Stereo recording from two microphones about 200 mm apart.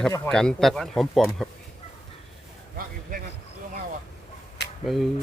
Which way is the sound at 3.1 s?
45° right (ahead or behind).